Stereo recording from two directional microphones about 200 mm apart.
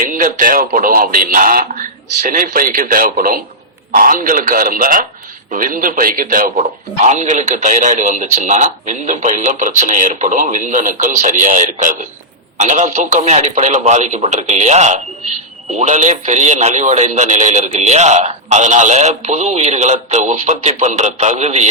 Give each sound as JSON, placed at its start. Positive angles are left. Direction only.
{"t": 0.1, "sound": "a man's voice", "side_deg": -40}